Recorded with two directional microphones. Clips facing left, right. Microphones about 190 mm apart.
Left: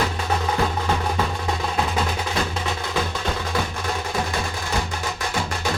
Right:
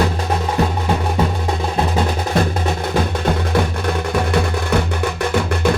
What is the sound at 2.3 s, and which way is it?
Music, 55° right (ahead or behind).